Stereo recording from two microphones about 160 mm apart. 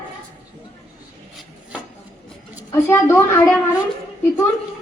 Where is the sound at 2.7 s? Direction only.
15° left (ahead or behind).